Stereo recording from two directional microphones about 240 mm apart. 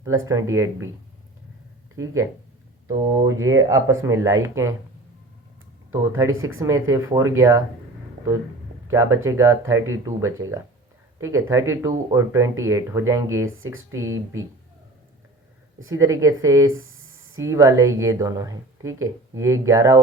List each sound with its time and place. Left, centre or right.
0.0 s speech: centre
2.8 s speech: centre
5.9 s speech: centre
8.9 s speech: centre
11.2 s speech: centre
15.9 s speech: centre
16.7 s a sound: right
17.3 s speech: centre